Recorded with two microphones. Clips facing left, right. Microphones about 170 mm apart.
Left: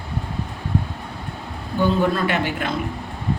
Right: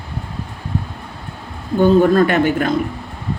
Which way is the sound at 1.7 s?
50° right (ahead or behind).